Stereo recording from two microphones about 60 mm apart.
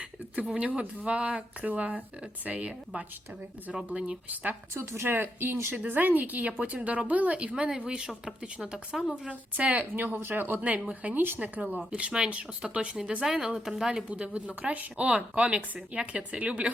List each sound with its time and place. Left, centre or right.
0.4 s speech: centre
4.7 s a woman's voice: right
9.9 s speech: right
10.8 s a woman's voice: centre
11.1 s speech: right
11.3 s a woman's voice: right; by 14.0 s centre
14.1 s speech: centre